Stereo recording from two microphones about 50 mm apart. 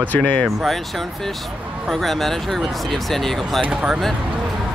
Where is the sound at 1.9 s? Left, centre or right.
Centre.